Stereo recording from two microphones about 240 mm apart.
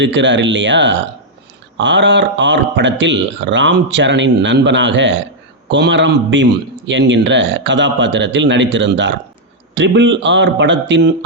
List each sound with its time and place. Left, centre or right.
0.0 s a man's voice: right